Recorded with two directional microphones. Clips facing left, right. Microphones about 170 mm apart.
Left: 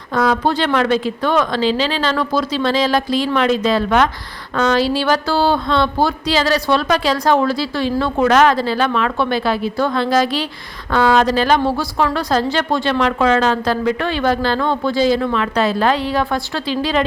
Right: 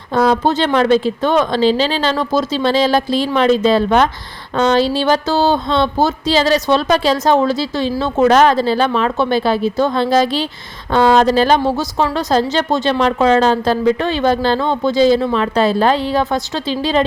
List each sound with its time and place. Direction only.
0.1 s speech: 25° right (ahead or behind)